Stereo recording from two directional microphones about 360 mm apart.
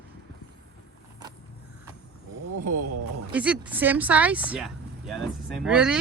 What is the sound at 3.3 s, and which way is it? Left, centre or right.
Speech, centre.